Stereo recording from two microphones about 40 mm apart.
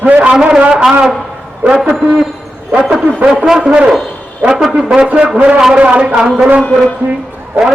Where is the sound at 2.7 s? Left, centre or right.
Right.